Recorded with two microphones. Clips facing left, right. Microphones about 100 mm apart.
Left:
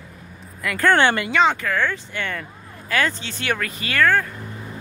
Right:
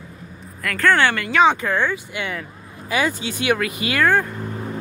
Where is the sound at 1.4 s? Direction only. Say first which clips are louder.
Right 2 dB; 20° right (ahead or behind).